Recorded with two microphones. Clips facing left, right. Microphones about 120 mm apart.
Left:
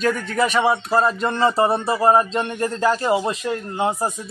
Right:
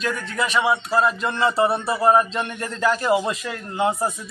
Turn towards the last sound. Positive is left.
turn(degrees=30)  # may be behind; listen again after turning